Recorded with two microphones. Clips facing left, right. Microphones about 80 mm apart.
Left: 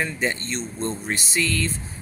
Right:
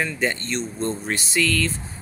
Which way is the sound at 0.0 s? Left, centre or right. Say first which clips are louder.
Right 1 dB; centre.